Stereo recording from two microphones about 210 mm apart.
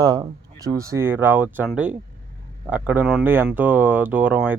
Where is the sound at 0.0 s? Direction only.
20° right (ahead or behind).